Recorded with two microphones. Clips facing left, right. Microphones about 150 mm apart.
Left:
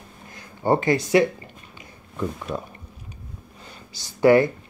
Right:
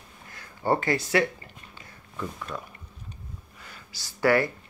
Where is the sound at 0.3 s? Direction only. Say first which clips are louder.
Left 4 dB; 20° left (ahead or behind).